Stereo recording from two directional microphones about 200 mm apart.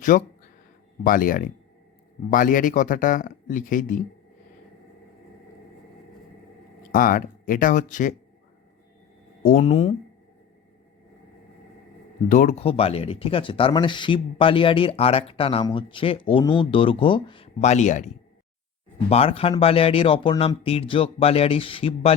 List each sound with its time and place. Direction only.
0.1 s speech: 45° left (ahead or behind)
6.9 s speech: 45° left (ahead or behind)
9.4 s speech: 40° left (ahead or behind)
12.3 s speech: 40° left (ahead or behind)